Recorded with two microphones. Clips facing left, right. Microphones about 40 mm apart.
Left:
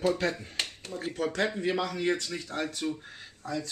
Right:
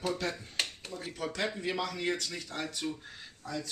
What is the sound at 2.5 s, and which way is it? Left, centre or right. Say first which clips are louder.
Speech: left 5 dB; left.